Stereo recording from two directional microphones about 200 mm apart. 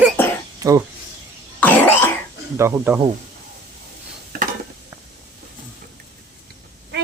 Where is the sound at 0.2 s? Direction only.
10° left (ahead or behind).